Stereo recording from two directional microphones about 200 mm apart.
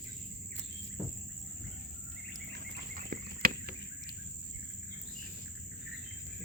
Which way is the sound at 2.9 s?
45° right (ahead or behind).